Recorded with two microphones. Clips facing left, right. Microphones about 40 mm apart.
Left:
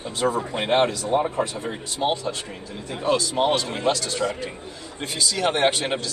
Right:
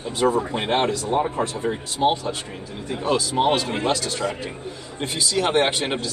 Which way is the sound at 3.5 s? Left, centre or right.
Centre.